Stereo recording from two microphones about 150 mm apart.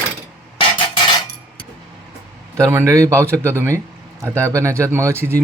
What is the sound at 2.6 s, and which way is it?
A man's voice, 20° right (ahead or behind).